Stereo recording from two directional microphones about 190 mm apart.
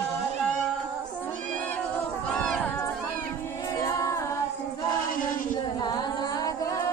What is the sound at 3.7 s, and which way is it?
A capella, 15° left (ahead or behind).